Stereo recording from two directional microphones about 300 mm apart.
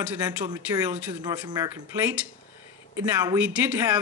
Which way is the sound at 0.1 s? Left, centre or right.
Centre.